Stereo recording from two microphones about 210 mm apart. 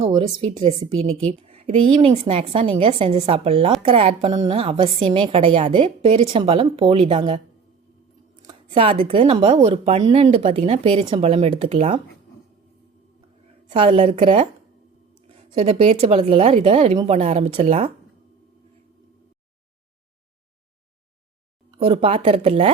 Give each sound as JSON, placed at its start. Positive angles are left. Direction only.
{"t": 0.0, "sound": "a woman's voice", "side_deg": -20}
{"t": 13.7, "sound": "a woman's voice", "side_deg": -25}
{"t": 15.6, "sound": "a woman's voice", "side_deg": -30}
{"t": 21.8, "sound": "a woman's voice", "side_deg": -25}